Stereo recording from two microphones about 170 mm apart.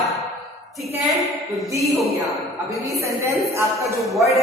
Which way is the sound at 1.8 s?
Centre (ahead or behind).